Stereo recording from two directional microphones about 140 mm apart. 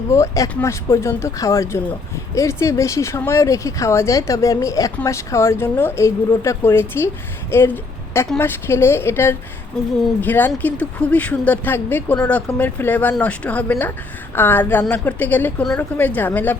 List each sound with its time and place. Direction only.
0.1 s a woman's voice: 20° left (ahead or behind)